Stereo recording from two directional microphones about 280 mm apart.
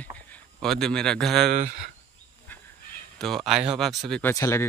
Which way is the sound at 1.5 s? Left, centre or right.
Right.